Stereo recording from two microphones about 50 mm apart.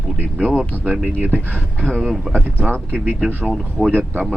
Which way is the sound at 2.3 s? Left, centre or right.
Right.